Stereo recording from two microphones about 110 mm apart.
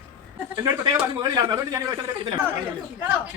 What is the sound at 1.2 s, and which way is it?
Speech, 35° right (ahead or behind).